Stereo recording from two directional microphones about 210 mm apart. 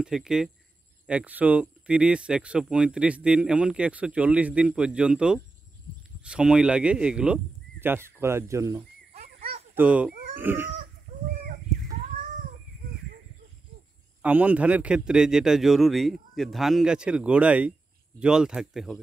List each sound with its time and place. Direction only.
0.0 s speech: 5° right (ahead or behind)
9.1 s a sound: 35° right (ahead or behind)
9.8 s speech: 5° right (ahead or behind)
14.2 s speech: 5° right (ahead or behind)